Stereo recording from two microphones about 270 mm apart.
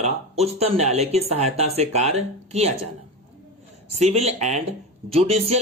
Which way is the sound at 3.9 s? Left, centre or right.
Right.